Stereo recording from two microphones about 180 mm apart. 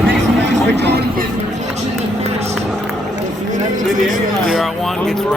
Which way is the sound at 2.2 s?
35° right (ahead or behind).